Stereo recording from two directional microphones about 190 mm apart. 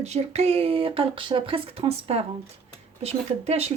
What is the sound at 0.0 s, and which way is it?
Speech, 35° right (ahead or behind).